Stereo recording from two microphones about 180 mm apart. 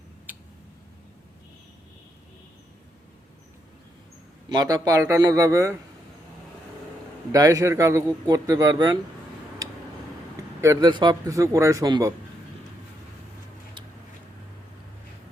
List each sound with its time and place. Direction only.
0.3 s tick: 10° right (ahead or behind)
4.5 s a man's voice: 20° right (ahead or behind)
7.3 s a man's voice: 20° right (ahead or behind)
10.6 s a man's voice: 20° right (ahead or behind)